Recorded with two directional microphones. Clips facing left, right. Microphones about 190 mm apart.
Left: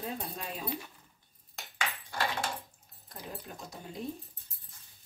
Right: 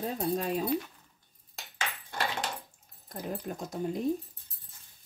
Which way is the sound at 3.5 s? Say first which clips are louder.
Right 9 dB; 50° right (ahead or behind).